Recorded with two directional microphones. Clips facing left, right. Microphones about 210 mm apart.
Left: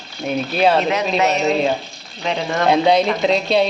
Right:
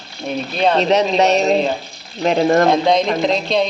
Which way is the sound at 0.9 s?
30° right (ahead or behind).